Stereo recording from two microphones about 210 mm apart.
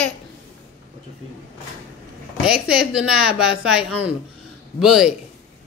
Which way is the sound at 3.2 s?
90° left.